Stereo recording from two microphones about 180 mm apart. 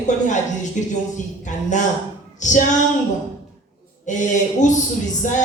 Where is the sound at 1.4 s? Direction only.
45° left (ahead or behind).